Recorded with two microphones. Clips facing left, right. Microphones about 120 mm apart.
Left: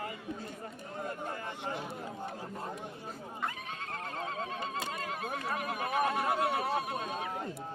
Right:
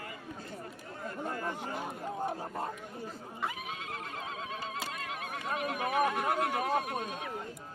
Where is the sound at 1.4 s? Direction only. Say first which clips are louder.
Right 2 dB; 45° right (ahead or behind).